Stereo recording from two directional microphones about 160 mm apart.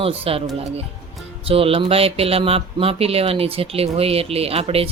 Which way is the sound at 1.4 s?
35° right (ahead or behind).